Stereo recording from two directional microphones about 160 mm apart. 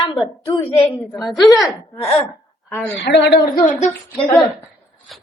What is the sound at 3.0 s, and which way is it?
Speech, 90° left.